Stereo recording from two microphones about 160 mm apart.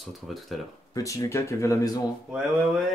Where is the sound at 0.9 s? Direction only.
20° left (ahead or behind).